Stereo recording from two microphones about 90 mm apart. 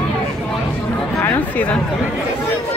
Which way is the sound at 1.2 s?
20° left (ahead or behind).